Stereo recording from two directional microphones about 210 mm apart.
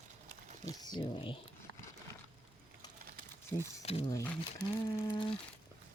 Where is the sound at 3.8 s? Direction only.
30° left (ahead or behind).